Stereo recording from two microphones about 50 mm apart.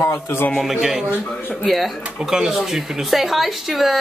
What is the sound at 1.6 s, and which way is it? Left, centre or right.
Female singing, centre.